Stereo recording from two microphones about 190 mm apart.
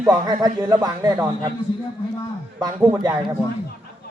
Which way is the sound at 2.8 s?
15° right (ahead or behind).